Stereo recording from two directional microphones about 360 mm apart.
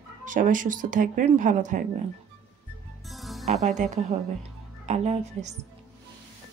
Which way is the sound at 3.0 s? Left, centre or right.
Centre.